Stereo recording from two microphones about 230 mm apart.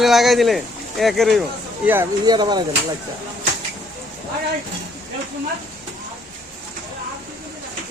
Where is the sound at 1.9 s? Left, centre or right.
Centre.